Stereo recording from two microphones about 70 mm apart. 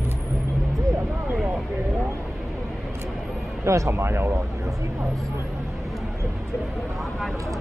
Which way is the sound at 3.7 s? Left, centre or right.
Right.